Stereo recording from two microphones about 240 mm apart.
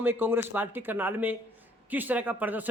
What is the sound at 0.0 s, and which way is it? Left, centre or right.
Speech, centre.